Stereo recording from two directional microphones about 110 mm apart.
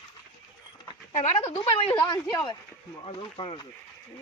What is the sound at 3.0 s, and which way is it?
Speech, 50° left (ahead or behind).